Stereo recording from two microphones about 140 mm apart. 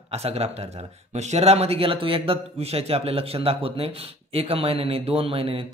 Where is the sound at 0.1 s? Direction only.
45° right (ahead or behind).